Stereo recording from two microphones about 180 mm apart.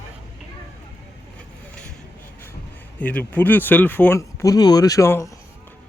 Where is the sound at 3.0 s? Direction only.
10° left (ahead or behind).